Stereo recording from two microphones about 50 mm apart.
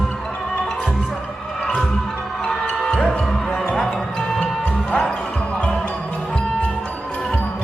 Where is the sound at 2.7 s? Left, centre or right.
Centre.